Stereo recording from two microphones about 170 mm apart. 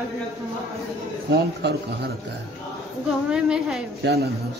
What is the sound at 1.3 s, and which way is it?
Speech, 75° right (ahead or behind).